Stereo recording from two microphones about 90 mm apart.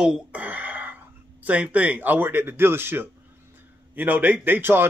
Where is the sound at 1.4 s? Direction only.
15° right (ahead or behind).